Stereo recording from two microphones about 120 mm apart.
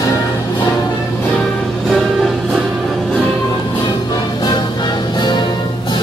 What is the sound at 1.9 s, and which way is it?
Music, centre (ahead or behind).